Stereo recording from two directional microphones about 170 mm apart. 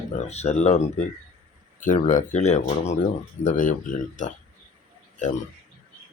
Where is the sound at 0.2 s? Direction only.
40° left (ahead or behind).